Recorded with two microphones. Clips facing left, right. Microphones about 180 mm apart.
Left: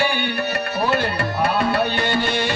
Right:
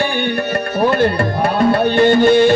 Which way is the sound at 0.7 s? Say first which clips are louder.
Right 8 dB; 50° right (ahead or behind).